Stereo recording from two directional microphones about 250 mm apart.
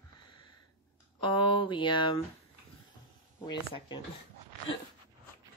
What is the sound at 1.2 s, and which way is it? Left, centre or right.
Speech, centre.